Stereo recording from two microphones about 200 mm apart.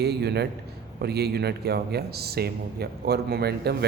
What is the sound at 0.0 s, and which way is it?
A man's voice, 55° right (ahead or behind).